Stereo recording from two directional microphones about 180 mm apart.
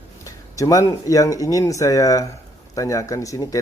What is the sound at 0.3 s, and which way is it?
Speech, 20° left (ahead or behind).